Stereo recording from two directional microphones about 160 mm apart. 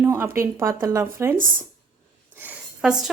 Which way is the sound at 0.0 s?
15° right (ahead or behind).